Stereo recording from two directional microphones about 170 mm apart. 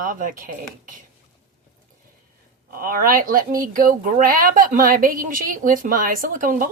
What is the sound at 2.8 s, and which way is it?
A woman's voice, 55° right (ahead or behind).